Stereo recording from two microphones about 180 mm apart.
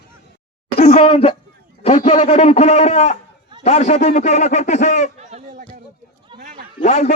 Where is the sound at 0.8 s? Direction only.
35° left (ahead or behind).